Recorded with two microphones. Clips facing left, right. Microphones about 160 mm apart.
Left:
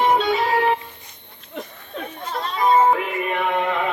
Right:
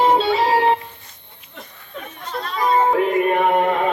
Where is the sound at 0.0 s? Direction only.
30° right (ahead or behind).